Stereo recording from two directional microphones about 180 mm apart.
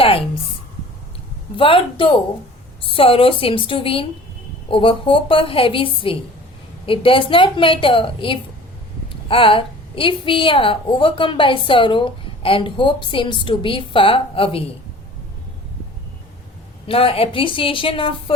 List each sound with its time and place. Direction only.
0.0 s a sound: 30° left (ahead or behind)
1.5 s a woman's voice: 30° left (ahead or behind)
16.8 s a woman's voice: 30° left (ahead or behind)